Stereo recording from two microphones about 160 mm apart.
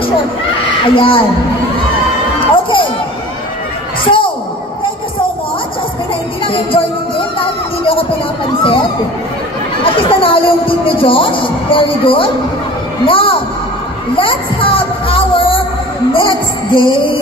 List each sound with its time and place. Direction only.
0.8 s speech: 35° left (ahead or behind)
2.5 s crowd: 30° left (ahead or behind)
4.0 s speech: 30° left (ahead or behind)
6.4 s music: 35° left (ahead or behind)
10.0 s speech: 35° left (ahead or behind)
14.1 s music: 35° left (ahead or behind)